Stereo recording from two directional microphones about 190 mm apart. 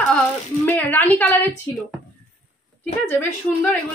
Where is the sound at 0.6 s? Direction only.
10° left (ahead or behind).